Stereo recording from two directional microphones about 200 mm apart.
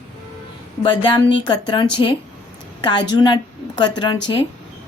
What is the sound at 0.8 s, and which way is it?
Speech, 25° left (ahead or behind).